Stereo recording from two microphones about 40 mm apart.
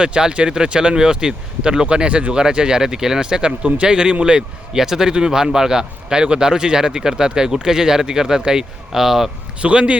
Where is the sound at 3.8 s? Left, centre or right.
Right.